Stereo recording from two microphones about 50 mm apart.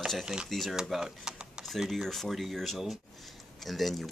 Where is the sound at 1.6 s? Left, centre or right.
Centre.